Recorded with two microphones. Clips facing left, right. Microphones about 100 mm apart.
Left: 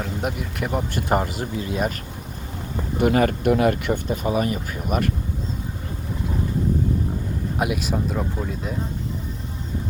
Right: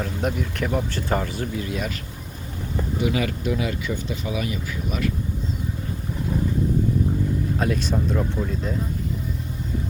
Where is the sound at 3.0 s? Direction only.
50° left (ahead or behind).